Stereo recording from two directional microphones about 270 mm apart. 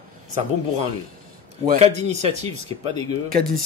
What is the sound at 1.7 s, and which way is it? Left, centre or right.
Speech, right.